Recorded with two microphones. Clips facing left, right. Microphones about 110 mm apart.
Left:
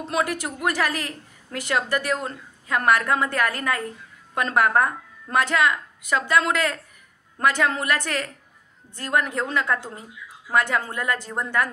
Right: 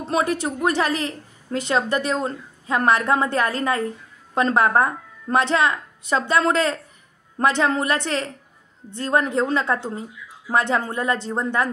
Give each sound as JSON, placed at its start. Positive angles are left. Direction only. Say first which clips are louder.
{"t": 0.0, "sound": "a woman's voice", "louder": "right 3 dB", "side_deg": -30}